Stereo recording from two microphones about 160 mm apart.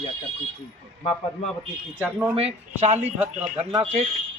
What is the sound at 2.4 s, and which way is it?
Speech, 40° right (ahead or behind).